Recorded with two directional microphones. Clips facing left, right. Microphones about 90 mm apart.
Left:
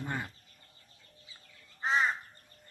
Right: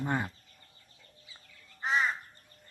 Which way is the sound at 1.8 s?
30° left (ahead or behind).